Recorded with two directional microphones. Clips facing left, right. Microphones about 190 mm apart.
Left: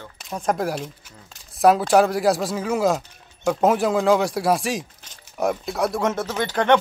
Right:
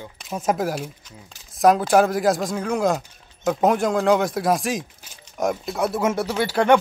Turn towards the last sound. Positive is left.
turn(degrees=-10)  # may be behind; listen again after turning